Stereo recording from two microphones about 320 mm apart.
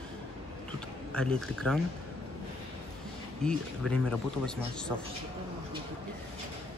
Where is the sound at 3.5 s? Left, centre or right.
Centre.